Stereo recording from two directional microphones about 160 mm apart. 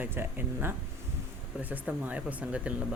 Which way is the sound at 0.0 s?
15° right (ahead or behind).